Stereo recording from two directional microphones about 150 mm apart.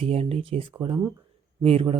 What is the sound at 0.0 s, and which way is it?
Speech, 40° right (ahead or behind).